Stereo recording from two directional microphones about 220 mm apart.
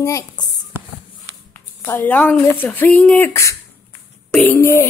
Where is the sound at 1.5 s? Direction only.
10° left (ahead or behind).